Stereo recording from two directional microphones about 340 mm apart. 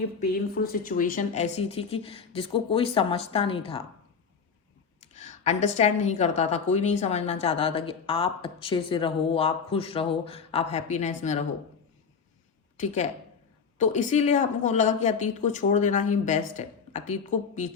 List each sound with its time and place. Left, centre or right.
0.2 s speech: left
5.1 s a woman's voice: left
12.7 s a woman's voice: left